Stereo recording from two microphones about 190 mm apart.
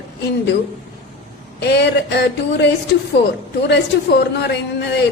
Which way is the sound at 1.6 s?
65° left (ahead or behind).